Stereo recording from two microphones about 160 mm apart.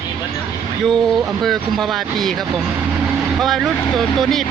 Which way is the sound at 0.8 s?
Centre (ahead or behind).